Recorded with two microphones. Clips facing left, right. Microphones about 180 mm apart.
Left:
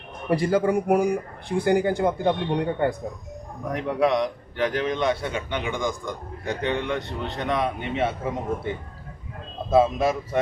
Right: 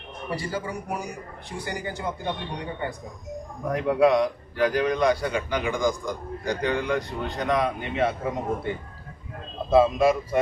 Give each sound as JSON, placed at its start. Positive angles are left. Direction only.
{"t": 0.3, "sound": "speech", "side_deg": 55}
{"t": 3.7, "sound": "a man's voice", "side_deg": 0}
{"t": 9.7, "sound": "a man's voice", "side_deg": 0}